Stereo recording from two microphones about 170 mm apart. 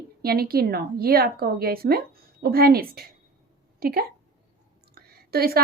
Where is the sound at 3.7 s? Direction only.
60° right (ahead or behind).